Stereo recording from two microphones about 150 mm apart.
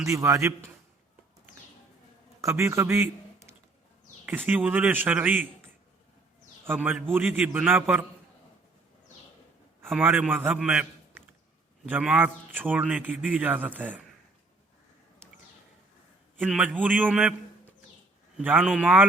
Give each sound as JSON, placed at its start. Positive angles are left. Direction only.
{"t": 0.0, "sound": "a man's voice", "side_deg": -20}
{"t": 2.4, "sound": "a man's voice", "side_deg": -20}
{"t": 6.7, "sound": "a man's voice", "side_deg": -10}
{"t": 10.0, "sound": "a man's voice", "side_deg": -10}
{"t": 11.9, "sound": "a man's voice", "side_deg": -10}
{"t": 16.5, "sound": "a man's voice", "side_deg": 5}
{"t": 16.7, "sound": "a man's voice", "side_deg": -10}
{"t": 18.3, "sound": "a man's voice", "side_deg": -5}